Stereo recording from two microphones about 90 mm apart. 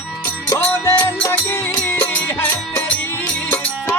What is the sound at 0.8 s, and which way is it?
Music, 25° left (ahead or behind).